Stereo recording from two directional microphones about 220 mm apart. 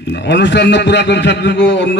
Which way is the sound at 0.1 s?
50° left (ahead or behind).